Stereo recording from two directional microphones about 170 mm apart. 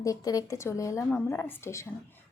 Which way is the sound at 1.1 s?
5° left (ahead or behind).